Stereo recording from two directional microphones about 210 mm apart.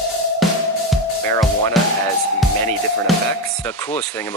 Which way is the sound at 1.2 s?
15° left (ahead or behind).